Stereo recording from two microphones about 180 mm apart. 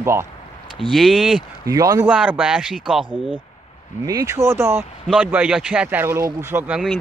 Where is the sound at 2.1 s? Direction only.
5° right (ahead or behind).